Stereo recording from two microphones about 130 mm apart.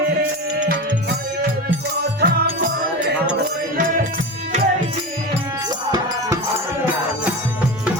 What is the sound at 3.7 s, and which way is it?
Music, 85° right.